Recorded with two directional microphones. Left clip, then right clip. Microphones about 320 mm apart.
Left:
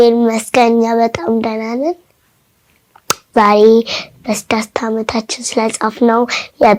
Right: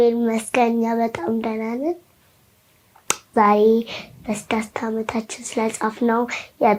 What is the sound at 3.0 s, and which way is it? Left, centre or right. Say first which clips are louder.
Speech: left 6 dB; left.